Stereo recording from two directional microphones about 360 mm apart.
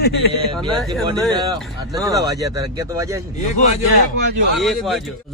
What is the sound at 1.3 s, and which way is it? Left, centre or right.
Speech, centre.